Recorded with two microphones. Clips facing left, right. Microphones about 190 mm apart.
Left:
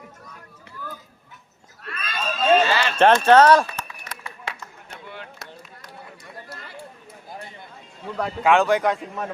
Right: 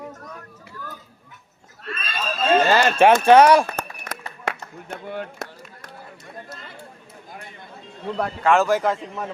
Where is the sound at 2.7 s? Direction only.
45° right (ahead or behind).